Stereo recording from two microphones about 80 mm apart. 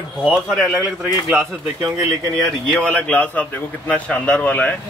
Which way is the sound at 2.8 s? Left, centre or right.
Centre.